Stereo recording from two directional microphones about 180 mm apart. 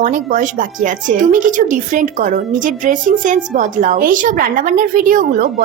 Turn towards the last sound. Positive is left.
turn(degrees=-50)  # may be behind; listen again after turning